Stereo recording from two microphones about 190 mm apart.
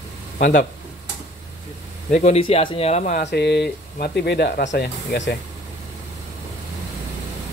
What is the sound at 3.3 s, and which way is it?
Speech, 60° left (ahead or behind).